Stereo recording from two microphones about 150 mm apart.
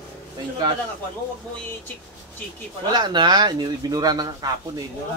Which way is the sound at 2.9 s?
30° right (ahead or behind).